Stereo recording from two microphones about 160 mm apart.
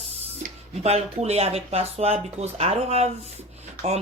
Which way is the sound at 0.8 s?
40° right (ahead or behind).